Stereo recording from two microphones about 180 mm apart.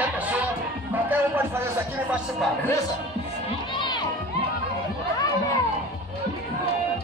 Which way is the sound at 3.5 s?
25° left (ahead or behind).